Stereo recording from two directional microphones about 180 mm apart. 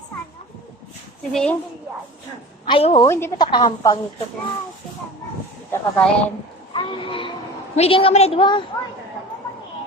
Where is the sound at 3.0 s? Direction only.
15° left (ahead or behind).